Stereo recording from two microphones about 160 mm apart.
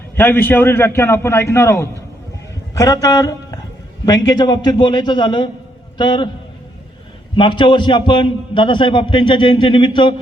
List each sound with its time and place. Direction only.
0.2 s a man's voice: 10° left (ahead or behind); by 6.3 s 30° left (ahead or behind)
7.3 s a man's voice: 30° left (ahead or behind)